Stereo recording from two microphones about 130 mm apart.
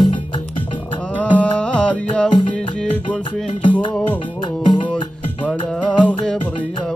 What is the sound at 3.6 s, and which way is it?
Music, 35° left (ahead or behind).